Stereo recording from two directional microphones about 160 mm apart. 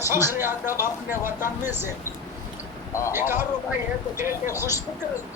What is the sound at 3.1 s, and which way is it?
Speech, 15° right (ahead or behind).